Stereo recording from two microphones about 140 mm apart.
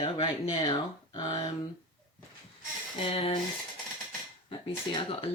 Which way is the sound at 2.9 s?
40° left (ahead or behind).